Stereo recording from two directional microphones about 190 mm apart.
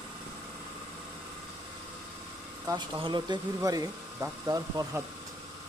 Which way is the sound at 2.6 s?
25° right (ahead or behind).